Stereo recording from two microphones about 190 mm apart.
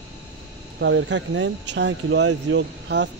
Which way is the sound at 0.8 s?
75° right (ahead or behind).